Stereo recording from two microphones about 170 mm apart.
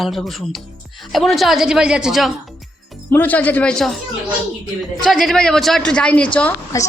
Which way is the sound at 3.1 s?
10° left (ahead or behind).